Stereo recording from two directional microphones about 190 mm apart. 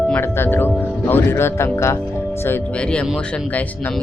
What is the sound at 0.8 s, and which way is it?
Speech, 10° left (ahead or behind).